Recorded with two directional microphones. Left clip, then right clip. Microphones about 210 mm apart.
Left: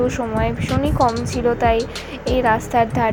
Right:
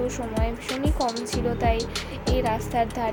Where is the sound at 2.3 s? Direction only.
20° left (ahead or behind).